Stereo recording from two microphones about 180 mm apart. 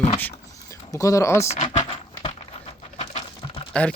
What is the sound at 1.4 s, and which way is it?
Speech, 35° left (ahead or behind).